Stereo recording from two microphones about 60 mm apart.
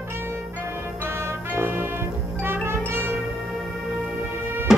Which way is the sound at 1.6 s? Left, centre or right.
Right.